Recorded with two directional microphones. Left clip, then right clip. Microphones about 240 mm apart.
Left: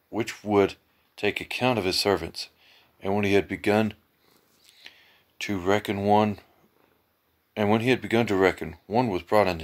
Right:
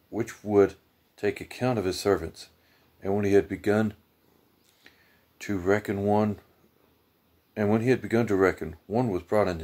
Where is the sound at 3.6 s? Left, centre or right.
Centre.